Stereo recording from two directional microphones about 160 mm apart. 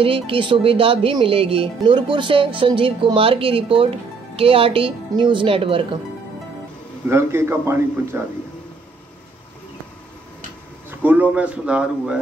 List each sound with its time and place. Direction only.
0.0 s speech: 35° right (ahead or behind)
7.1 s speech: 15° right (ahead or behind)
10.9 s speech: 10° right (ahead or behind)